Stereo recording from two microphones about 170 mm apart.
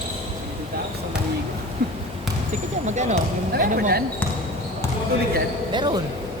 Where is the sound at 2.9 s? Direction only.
45° right (ahead or behind).